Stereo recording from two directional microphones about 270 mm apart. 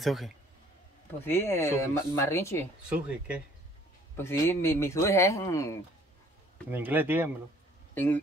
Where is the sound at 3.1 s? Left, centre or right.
Centre.